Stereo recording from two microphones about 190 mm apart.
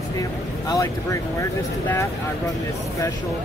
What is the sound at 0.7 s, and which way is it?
Speech, 20° left (ahead or behind).